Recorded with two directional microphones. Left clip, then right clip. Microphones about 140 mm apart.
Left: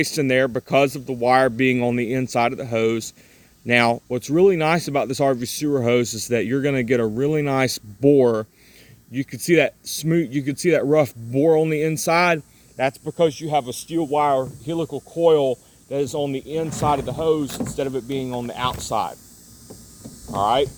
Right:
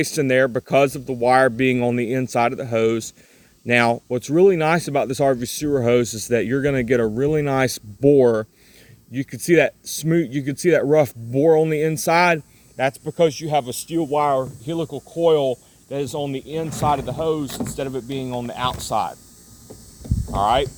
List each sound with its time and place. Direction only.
0.0 s speech: 10° right (ahead or behind)
12.7 s speech: 65° right (ahead or behind)
14.2 s speech: 90° right; by 15.5 s 55° right (ahead or behind)
15.9 s speech: 35° right (ahead or behind)
20.3 s speech: 35° right (ahead or behind)